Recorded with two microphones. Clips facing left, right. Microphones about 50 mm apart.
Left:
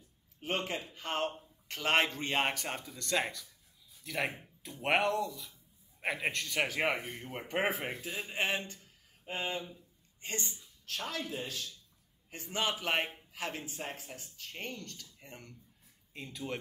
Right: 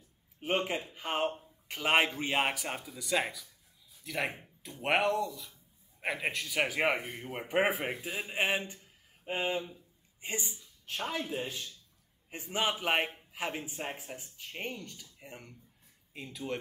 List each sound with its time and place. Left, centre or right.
0.4 s speech: centre